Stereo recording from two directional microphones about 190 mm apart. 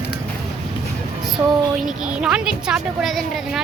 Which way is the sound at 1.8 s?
5° right (ahead or behind).